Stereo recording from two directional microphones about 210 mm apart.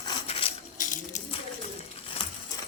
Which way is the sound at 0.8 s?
40° left (ahead or behind).